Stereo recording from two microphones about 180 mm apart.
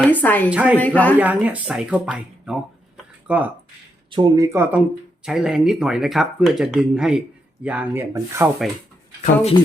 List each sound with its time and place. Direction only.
0.0 s a woman's voice: 10° left (ahead or behind)
0.5 s speech: 5° right (ahead or behind)
0.8 s a woman's voice: 10° left (ahead or behind)
1.2 s speech: 10° right (ahead or behind)
4.1 s speech: 30° right (ahead or behind)
4.4 s speech: 15° right (ahead or behind)
5.2 s speech: 5° right (ahead or behind)
9.2 s speech: 35° left (ahead or behind)